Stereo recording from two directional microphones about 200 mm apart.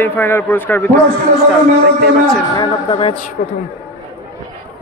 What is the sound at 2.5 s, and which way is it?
Speech, 20° left (ahead or behind).